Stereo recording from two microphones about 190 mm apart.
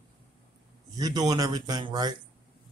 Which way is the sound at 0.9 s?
20° right (ahead or behind).